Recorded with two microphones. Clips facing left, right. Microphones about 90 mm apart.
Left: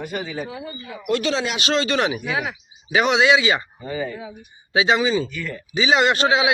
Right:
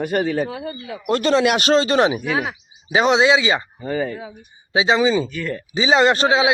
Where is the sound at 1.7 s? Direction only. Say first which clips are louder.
Right 2 dB; 35° right (ahead or behind).